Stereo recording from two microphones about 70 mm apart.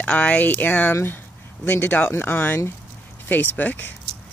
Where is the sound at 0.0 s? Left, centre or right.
Centre.